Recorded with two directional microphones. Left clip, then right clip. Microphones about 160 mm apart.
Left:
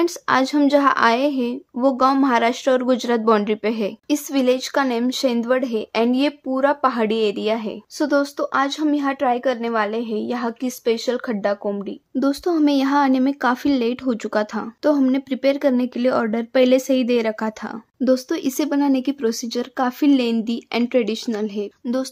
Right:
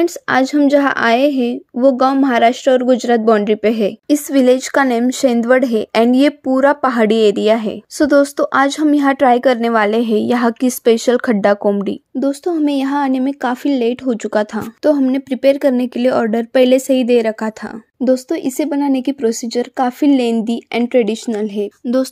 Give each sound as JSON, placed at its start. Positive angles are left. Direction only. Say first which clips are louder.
{"t": 0.0, "sound": "a woman's voice", "louder": "right 4 dB", "side_deg": -25}
{"t": 12.2, "sound": "speech", "louder": "right 2 dB", "side_deg": -5}